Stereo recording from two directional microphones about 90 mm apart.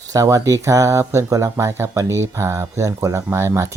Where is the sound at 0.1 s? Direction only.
40° right (ahead or behind).